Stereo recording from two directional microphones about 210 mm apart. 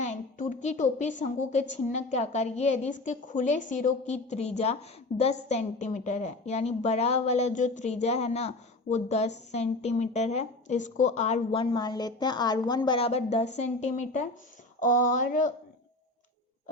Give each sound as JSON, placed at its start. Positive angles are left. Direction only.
{"t": 0.0, "sound": "a woman's voice", "side_deg": 35}